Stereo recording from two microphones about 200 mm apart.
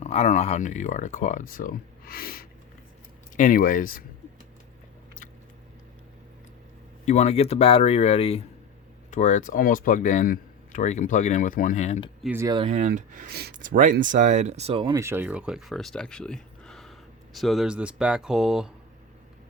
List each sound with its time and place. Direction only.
0.0 s speech: 35° left (ahead or behind)
7.0 s speech: 35° left (ahead or behind)
12.2 s speech: 10° right (ahead or behind)
12.8 s speech: 40° right (ahead or behind)
14.9 s speech: 10° right (ahead or behind)